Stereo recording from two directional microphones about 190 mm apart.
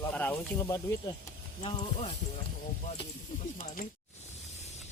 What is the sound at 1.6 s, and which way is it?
Speech, 35° left (ahead or behind).